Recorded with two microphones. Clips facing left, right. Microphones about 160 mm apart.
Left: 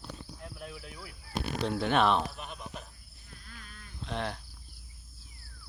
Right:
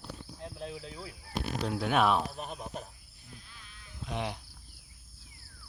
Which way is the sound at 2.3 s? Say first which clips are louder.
Right 3 dB; 40° right (ahead or behind).